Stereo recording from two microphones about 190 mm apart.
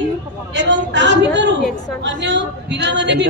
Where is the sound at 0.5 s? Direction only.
65° right (ahead or behind).